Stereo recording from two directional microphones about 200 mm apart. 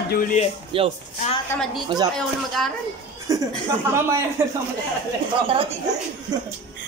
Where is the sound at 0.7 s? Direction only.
25° right (ahead or behind).